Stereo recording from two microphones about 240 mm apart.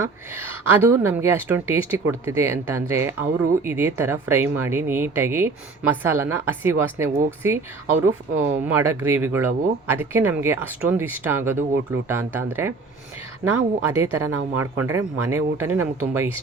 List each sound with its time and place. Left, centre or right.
0.0 s a woman's voice: centre